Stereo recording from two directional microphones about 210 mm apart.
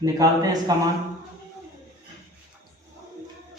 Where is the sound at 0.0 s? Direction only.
15° right (ahead or behind).